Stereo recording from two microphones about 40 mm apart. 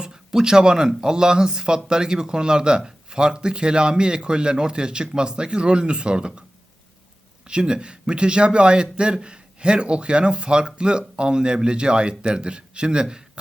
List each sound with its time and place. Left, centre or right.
0.0 s speech: centre
7.4 s speech: right